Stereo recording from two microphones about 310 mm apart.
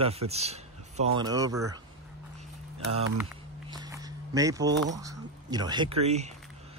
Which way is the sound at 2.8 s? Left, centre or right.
Right.